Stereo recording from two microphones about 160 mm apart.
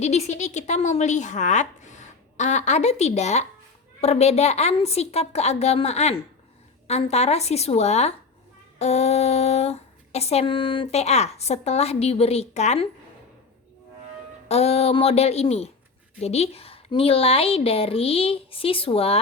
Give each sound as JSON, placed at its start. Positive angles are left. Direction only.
{"t": 0.0, "sound": "a woman's voice", "side_deg": 45}
{"t": 14.4, "sound": "speech", "side_deg": 40}